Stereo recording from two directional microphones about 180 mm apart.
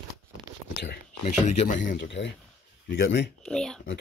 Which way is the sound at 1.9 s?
75° left (ahead or behind).